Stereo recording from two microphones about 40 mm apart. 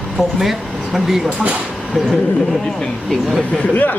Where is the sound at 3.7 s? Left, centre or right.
Left.